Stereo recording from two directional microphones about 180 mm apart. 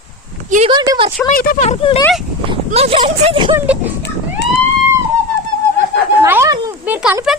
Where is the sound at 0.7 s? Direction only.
25° right (ahead or behind).